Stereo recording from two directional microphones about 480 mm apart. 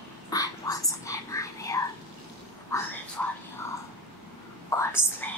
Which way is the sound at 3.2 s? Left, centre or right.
Centre.